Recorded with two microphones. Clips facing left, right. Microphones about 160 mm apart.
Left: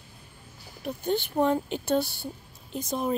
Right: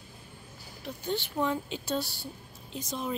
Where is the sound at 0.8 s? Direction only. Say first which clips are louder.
Left 5 dB; 50° left (ahead or behind).